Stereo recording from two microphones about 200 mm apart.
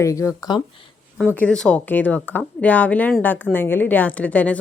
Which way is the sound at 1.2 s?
5° left (ahead or behind).